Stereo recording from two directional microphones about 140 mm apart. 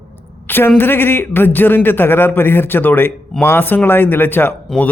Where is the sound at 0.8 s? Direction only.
15° left (ahead or behind).